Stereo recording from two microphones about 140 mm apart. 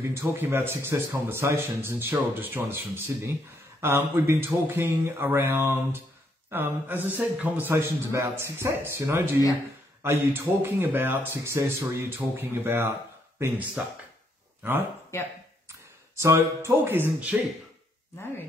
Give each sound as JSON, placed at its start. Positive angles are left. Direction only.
{"t": 0.0, "sound": "a man's voice", "side_deg": -20}
{"t": 16.2, "sound": "a man's voice", "side_deg": -20}